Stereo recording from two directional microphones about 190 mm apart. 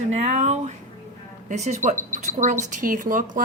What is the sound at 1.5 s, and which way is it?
A woman's voice, 40° right (ahead or behind).